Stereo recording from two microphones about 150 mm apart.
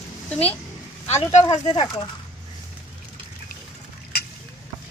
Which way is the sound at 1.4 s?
30° left (ahead or behind).